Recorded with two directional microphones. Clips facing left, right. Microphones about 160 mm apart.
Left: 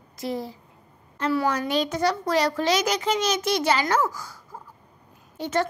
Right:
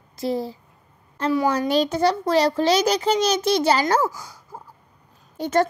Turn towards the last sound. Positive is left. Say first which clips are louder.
# right 5 dB
turn(degrees=-45)  # may be behind; listen again after turning